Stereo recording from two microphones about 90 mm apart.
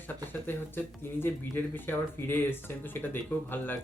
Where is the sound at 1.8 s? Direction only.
25° left (ahead or behind).